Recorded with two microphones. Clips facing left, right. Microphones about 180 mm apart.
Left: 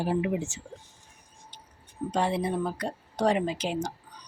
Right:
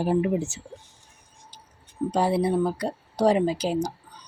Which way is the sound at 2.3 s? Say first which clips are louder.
Right 6 dB; 35° right (ahead or behind).